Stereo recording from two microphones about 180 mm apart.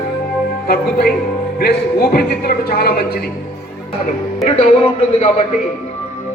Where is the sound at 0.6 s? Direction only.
55° left (ahead or behind).